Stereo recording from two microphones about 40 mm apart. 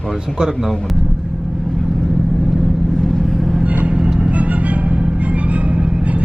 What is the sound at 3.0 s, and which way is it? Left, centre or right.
Vehicle, centre.